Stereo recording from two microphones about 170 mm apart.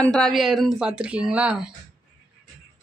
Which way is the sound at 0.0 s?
5° left (ahead or behind).